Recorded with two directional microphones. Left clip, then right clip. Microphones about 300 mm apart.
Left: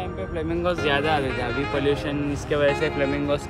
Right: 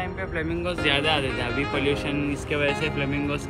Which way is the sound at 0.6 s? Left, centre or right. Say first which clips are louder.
Left 2 dB; centre.